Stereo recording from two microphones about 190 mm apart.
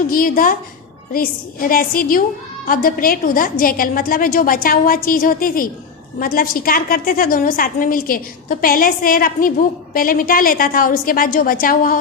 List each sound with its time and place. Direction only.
0.1 s a woman's voice: 45° left (ahead or behind)